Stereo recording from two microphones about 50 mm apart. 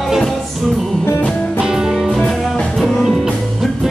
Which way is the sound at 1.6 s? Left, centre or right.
Centre.